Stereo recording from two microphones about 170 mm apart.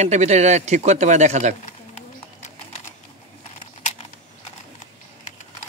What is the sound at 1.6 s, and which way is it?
Clip-clop, 45° left (ahead or behind).